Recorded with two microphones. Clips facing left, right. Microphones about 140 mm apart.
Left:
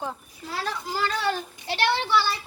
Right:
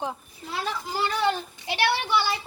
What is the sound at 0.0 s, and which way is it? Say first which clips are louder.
Speech: right 1 dB; 15° right (ahead or behind).